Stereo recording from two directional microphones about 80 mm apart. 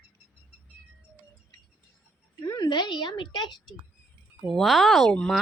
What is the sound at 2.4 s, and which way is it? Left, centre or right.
A woman's voice, left.